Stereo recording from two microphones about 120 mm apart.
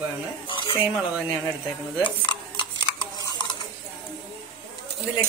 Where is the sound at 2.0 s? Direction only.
40° left (ahead or behind).